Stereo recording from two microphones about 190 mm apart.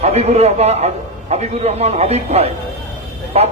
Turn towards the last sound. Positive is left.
turn(degrees=-35)  # may be behind; listen again after turning